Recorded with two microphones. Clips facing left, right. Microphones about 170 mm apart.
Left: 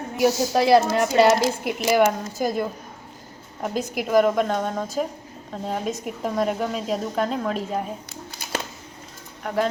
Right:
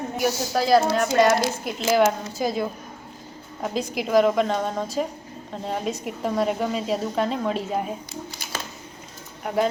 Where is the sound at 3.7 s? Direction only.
50° left (ahead or behind).